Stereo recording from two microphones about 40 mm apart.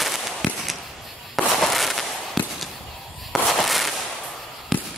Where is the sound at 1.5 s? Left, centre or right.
Centre.